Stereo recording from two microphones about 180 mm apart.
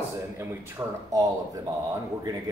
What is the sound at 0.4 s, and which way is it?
A man's voice, 15° right (ahead or behind).